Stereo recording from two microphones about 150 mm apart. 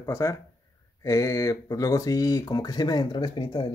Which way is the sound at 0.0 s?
20° left (ahead or behind).